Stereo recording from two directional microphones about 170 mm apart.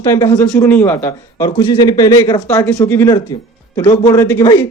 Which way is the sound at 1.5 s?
25° left (ahead or behind).